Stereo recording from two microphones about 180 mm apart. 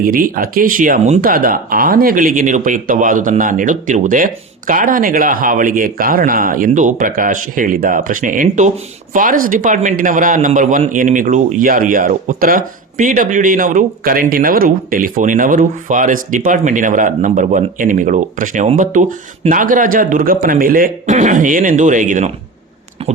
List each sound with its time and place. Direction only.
0.0 s speech: 50° right (ahead or behind)